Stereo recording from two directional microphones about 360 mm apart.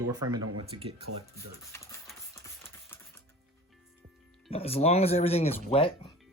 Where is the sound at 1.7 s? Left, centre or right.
Centre.